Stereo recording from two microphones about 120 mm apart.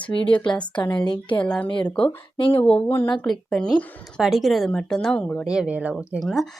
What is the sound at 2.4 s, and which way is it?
Speech, 50° left (ahead or behind).